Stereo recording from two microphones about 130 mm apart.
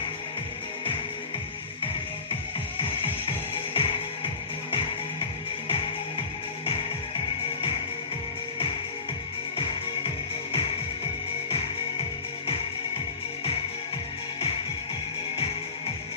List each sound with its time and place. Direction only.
3.8 s music: 45° left (ahead or behind)